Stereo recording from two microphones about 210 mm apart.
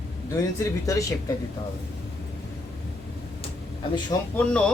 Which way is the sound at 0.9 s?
15° left (ahead or behind).